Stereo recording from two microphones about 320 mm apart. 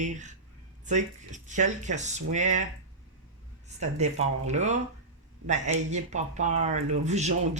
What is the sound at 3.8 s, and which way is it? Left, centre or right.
Speech, right.